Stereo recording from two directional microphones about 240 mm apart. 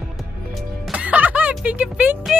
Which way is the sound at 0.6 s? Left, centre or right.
Centre.